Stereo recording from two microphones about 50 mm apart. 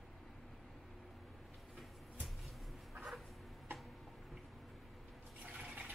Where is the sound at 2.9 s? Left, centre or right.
Centre.